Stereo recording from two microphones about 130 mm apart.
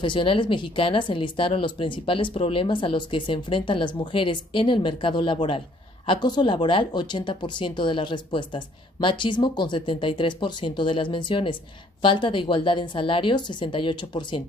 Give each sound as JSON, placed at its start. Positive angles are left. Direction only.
{"t": 0.0, "sound": "speech", "side_deg": 40}